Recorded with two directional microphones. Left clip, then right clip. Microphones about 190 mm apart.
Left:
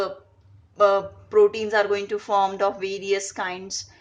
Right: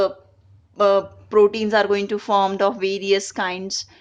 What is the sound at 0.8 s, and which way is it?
A woman's voice, 55° right (ahead or behind).